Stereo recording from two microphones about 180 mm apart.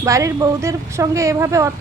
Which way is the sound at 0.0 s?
15° right (ahead or behind).